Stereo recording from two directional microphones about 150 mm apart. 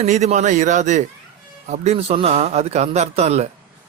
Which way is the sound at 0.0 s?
50° right (ahead or behind).